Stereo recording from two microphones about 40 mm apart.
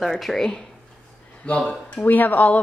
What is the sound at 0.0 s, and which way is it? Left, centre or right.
Speech, centre.